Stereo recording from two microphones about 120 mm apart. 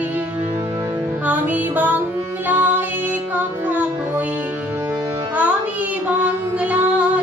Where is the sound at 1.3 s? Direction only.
15° right (ahead or behind).